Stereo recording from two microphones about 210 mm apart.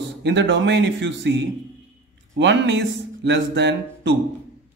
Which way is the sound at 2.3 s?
55° right (ahead or behind).